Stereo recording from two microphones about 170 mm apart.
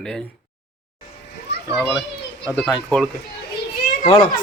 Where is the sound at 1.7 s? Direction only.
Centre (ahead or behind).